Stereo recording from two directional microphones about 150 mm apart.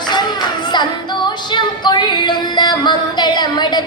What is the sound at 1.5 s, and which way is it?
Music, 30° left (ahead or behind).